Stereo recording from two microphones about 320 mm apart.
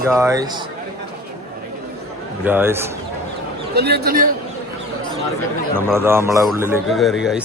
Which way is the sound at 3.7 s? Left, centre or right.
Right.